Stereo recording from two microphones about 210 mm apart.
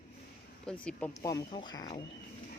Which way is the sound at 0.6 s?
5° left (ahead or behind).